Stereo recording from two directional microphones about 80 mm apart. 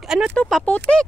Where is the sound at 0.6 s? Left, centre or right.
Centre.